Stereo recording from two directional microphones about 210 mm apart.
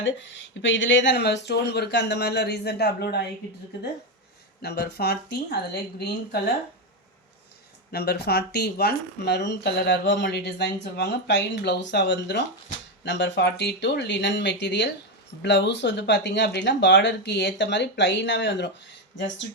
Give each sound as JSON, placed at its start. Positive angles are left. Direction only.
{"t": 0.0, "sound": "speech", "side_deg": 60}
{"t": 4.6, "sound": "speech", "side_deg": 50}
{"t": 7.9, "sound": "speech", "side_deg": 50}